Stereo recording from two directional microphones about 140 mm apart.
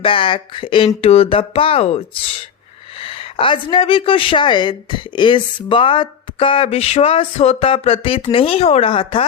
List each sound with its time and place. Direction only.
0.0 s speech: 40° left (ahead or behind)